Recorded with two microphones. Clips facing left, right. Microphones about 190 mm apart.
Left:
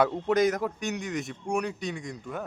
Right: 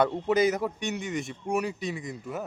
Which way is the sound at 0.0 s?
Centre (ahead or behind).